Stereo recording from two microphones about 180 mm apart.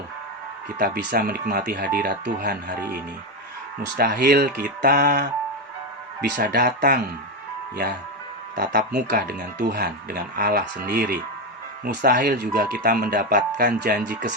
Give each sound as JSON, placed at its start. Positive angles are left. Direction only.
{"t": 0.8, "sound": "speech", "side_deg": -55}
{"t": 3.9, "sound": "speech", "side_deg": -65}
{"t": 6.3, "sound": "speech", "side_deg": -65}
{"t": 8.5, "sound": "speech", "side_deg": -65}